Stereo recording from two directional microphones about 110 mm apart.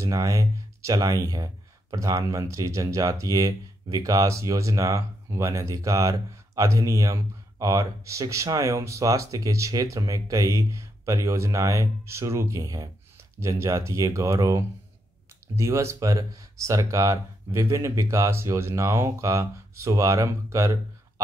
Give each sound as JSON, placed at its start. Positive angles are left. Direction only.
{"t": 0.0, "sound": "speech", "side_deg": -30}